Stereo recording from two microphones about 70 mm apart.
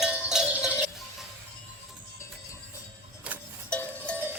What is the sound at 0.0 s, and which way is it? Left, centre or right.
Cowbell, centre.